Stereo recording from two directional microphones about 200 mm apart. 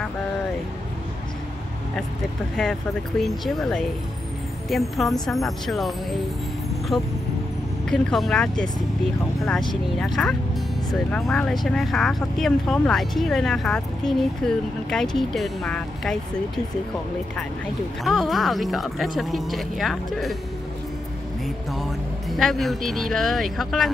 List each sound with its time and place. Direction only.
3.2 s speech: centre (ahead or behind)
6.9 s speech: 20° left (ahead or behind)
7.9 s speech: centre (ahead or behind)
9.9 s speech: centre (ahead or behind)
18.0 s speech: centre (ahead or behind)
22.3 s speech: centre (ahead or behind)